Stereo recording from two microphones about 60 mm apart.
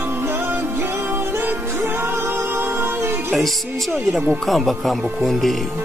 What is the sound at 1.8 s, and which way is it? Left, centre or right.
Music, right.